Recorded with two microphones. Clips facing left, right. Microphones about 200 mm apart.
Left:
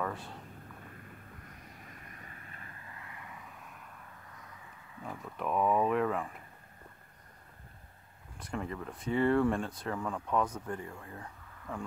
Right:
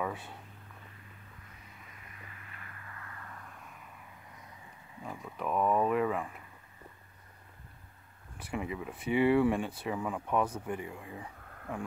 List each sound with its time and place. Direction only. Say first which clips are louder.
0.0 s a sound: right 1 dB; 5° right (ahead or behind)
0.9 s vehicle: left 4 dB; 50° left (ahead or behind); by 3.9 s centre (ahead or behind)
5.2 s speech: even; centre (ahead or behind)
8.4 s speech: right 1 dB; 10° right (ahead or behind)